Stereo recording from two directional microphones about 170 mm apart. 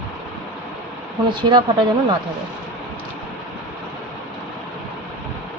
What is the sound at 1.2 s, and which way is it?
Speech, 30° right (ahead or behind).